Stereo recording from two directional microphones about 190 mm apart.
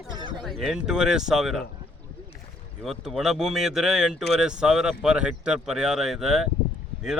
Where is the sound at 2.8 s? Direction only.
Centre (ahead or behind).